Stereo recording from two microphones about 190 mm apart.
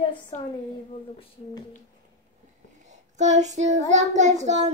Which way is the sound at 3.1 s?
40° right (ahead or behind).